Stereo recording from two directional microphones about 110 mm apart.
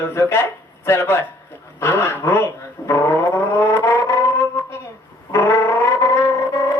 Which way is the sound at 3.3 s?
25° left (ahead or behind).